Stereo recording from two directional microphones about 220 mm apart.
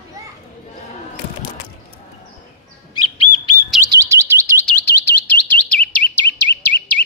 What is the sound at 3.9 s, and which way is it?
Chirp tone, 15° right (ahead or behind).